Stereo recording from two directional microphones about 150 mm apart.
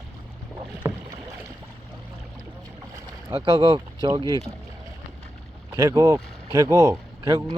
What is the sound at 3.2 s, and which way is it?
Speech, 30° right (ahead or behind).